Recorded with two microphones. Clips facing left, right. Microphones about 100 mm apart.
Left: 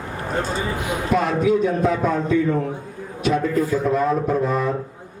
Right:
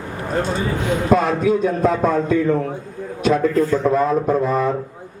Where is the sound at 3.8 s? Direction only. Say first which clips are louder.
Right 2 dB; 35° right (ahead or behind).